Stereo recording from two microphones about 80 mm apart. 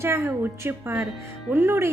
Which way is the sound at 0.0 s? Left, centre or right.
Right.